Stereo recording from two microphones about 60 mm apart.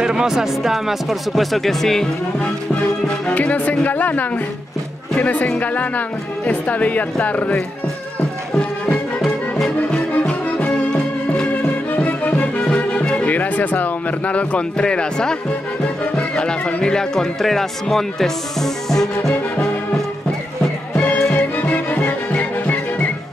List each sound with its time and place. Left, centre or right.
0.0 s speech: centre
3.3 s speech: left
8.5 s music: left
11.9 s music: left; by 15.3 s centre
15.8 s speech: centre
21.3 s music: left